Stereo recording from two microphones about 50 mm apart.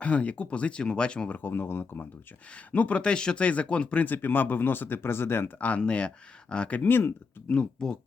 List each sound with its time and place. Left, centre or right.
0.0 s speech: left
1.3 s speech: left
2.7 s speech: left
4.0 s speech: left
5.5 s speech: left
6.7 s speech: left
7.4 s speech: left